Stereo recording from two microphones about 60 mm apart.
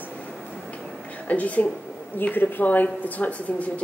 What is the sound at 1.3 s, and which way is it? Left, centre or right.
Speech, left.